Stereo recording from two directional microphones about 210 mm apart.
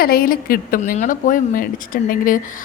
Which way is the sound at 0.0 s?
45° left (ahead or behind).